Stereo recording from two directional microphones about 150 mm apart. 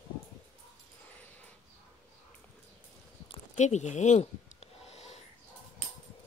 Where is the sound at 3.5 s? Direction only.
50° left (ahead or behind).